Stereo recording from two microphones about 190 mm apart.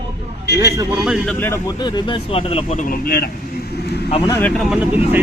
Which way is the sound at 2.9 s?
55° left (ahead or behind).